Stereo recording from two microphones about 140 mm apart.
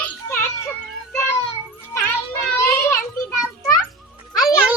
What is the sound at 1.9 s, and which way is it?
Music, 20° left (ahead or behind).